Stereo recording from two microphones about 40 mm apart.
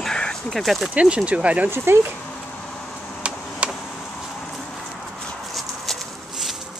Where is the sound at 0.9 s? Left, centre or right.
Right.